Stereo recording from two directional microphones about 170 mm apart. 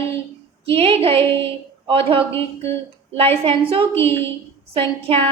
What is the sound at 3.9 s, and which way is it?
Speech, 15° left (ahead or behind).